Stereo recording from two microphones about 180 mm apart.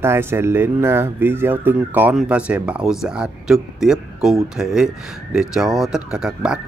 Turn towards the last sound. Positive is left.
turn(degrees=-5)  # may be behind; listen again after turning